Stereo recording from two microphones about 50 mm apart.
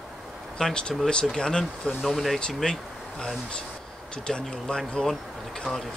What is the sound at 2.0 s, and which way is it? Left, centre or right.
Speech, centre.